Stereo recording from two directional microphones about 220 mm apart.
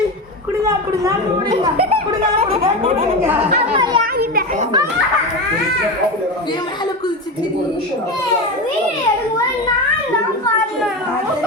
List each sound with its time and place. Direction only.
2.4 s speech: 25° right (ahead or behind)
4.0 s children playing: 40° right (ahead or behind)